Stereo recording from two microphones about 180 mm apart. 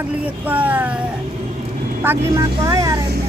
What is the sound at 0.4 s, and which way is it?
Speech, 10° right (ahead or behind).